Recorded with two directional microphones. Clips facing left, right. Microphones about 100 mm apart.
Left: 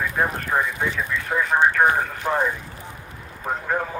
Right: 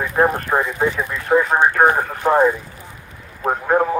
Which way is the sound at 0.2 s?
35° right (ahead or behind).